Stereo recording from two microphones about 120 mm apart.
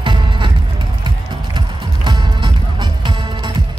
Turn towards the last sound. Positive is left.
turn(degrees=-40)  # may be behind; listen again after turning